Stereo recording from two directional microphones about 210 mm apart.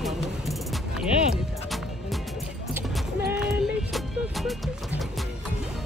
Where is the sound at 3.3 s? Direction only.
Centre (ahead or behind).